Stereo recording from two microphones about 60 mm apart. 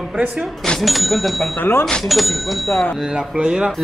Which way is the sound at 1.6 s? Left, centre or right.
Left.